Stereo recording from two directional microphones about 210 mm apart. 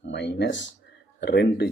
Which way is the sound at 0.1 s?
55° left (ahead or behind).